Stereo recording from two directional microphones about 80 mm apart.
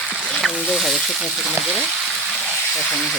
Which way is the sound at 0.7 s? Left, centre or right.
Centre.